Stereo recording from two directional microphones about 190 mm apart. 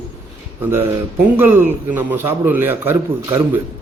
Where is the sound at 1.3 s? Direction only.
10° right (ahead or behind).